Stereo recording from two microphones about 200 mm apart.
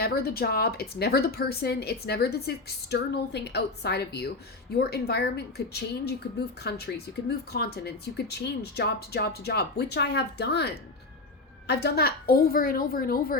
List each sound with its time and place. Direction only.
0.0 s a woman's voice: 50° left (ahead or behind)